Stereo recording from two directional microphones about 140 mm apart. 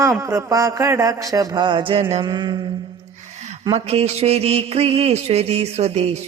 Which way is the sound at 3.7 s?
50° right (ahead or behind).